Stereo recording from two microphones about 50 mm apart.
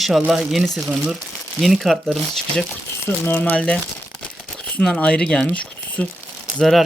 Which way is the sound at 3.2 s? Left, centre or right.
Left.